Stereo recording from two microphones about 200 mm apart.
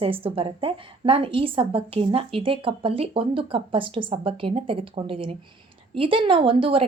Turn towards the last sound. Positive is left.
turn(degrees=-25)  # may be behind; listen again after turning